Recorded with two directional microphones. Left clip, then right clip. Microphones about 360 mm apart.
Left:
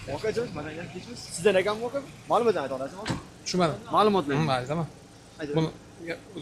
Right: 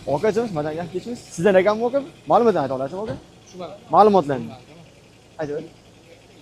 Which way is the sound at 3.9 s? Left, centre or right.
Right.